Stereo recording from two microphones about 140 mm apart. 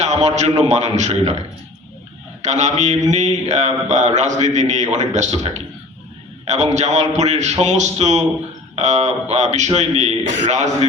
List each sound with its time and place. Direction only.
0.0 s a man's voice: 55° right (ahead or behind)
2.4 s mantra: 55° right (ahead or behind)
8.7 s a sound: 55° right (ahead or behind)
9.3 s a man's voice: 55° right (ahead or behind)